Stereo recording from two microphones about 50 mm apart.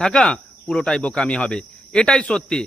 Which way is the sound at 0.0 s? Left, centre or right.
Centre.